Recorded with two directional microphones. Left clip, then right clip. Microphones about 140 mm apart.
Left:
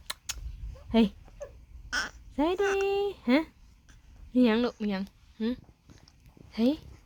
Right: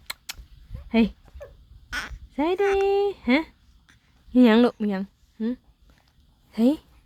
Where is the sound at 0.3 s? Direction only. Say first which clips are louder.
Right 1 dB; 50° right (ahead or behind).